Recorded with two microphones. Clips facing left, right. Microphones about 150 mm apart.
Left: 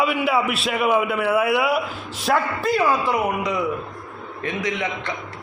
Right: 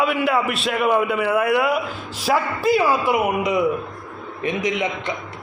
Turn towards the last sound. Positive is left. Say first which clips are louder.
# right 3 dB
turn(degrees=-15)  # may be behind; listen again after turning